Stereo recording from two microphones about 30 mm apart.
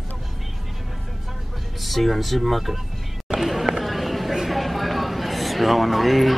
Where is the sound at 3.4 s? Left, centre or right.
Centre.